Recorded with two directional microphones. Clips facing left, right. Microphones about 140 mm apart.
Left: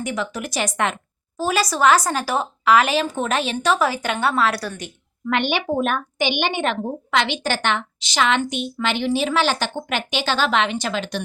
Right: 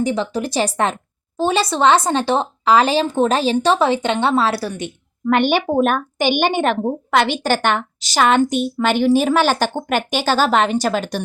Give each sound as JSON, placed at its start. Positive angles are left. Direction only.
{"t": 0.0, "sound": "speech", "side_deg": -30}
{"t": 5.3, "sound": "a woman's voice", "side_deg": -45}